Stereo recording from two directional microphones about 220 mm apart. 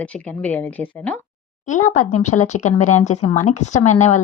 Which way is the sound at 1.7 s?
35° left (ahead or behind).